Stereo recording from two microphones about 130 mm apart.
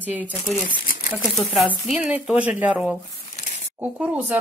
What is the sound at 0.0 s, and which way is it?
Speech, 10° right (ahead or behind).